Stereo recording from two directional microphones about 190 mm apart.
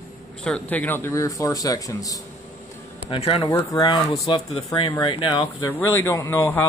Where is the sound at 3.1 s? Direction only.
30° left (ahead or behind).